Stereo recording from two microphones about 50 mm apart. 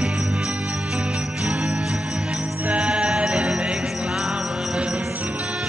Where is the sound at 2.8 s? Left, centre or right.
Right.